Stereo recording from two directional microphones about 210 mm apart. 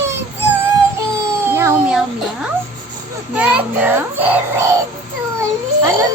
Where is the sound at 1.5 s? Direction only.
10° right (ahead or behind).